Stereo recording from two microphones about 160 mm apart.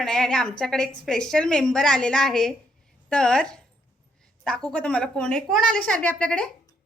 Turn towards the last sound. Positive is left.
turn(degrees=5)  # may be behind; listen again after turning